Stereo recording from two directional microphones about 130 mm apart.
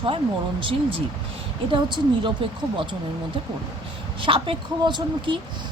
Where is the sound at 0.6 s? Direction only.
45° right (ahead or behind).